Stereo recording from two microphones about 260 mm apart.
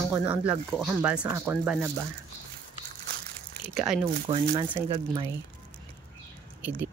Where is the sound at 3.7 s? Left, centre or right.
Centre.